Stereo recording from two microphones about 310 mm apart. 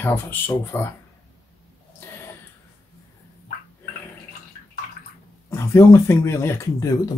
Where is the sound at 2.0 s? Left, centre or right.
Centre.